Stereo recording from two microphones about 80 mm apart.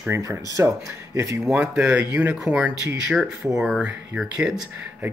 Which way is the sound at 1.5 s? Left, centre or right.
Centre.